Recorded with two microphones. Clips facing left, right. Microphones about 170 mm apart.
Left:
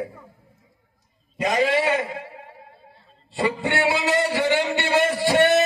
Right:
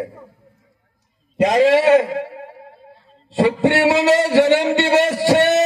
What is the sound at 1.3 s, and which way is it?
Speech, 90° right.